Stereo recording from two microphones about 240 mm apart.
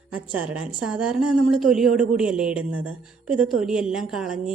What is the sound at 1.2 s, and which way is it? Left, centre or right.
Speech, right.